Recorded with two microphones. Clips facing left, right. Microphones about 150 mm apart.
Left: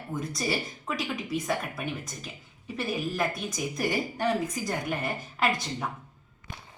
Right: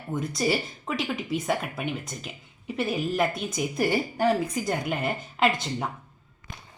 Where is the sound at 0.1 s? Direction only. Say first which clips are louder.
Right 5 dB; 25° right (ahead or behind).